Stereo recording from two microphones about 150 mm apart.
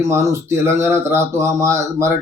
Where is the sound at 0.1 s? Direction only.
20° right (ahead or behind).